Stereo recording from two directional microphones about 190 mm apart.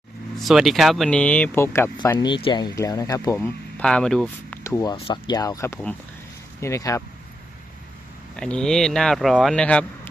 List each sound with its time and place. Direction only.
0.3 s speech: centre (ahead or behind)
2.1 s speech: 25° left (ahead or behind)
3.3 s speech: 5° left (ahead or behind)
4.6 s speech: 15° left (ahead or behind)
8.4 s speech: 5° left (ahead or behind)